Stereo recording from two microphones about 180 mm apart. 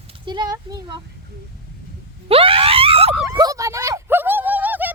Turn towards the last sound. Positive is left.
turn(degrees=-10)  # may be behind; listen again after turning